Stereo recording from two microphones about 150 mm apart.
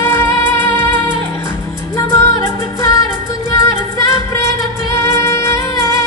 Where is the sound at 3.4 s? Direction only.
20° left (ahead or behind).